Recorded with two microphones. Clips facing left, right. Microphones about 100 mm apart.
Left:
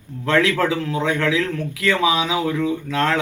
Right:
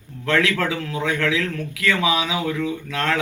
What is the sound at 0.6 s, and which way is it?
Speech, 20° left (ahead or behind).